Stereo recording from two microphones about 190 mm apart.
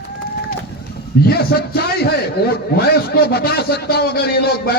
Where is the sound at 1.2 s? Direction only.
55° left (ahead or behind).